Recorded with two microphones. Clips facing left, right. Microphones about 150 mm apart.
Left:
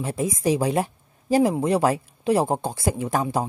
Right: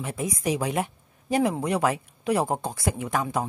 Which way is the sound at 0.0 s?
30° left (ahead or behind).